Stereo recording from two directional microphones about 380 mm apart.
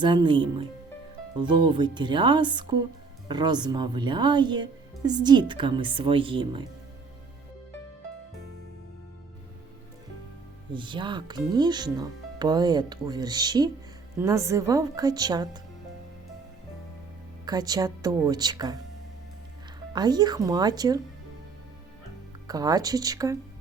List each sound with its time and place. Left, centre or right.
0.0 s speech: centre
10.7 s speech: centre
17.4 s speech: centre
19.9 s speech: centre
22.4 s speech: centre